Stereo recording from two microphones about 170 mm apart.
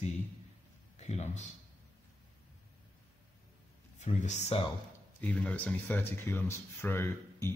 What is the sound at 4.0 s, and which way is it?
Speech, 45° left (ahead or behind).